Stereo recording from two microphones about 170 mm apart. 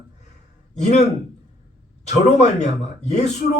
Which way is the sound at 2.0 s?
40° left (ahead or behind).